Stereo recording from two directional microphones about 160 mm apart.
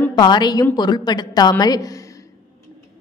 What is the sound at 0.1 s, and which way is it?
A woman's voice, 25° left (ahead or behind).